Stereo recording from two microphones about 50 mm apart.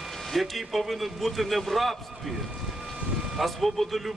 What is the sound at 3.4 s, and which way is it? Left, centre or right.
Speech, centre.